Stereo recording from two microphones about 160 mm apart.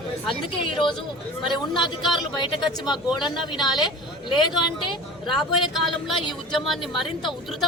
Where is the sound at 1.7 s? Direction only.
30° left (ahead or behind).